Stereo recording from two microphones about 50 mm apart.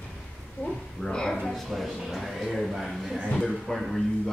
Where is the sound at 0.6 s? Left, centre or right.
Left.